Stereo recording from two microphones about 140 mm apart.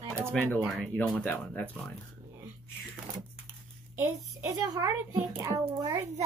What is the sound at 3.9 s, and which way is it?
A child's voice, 20° right (ahead or behind).